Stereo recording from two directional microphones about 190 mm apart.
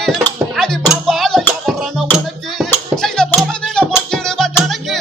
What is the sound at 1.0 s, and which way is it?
Music, centre (ahead or behind).